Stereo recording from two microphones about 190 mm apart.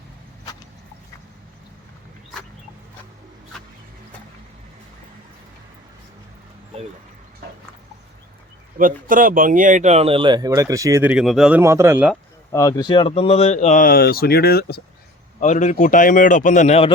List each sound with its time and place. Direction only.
8.8 s speech: 45° right (ahead or behind); by 11.1 s 15° right (ahead or behind)
11.1 s speech: centre (ahead or behind)
12.5 s speech: 20° left (ahead or behind); by 14.8 s 55° left (ahead or behind)
15.4 s speech: 40° left (ahead or behind)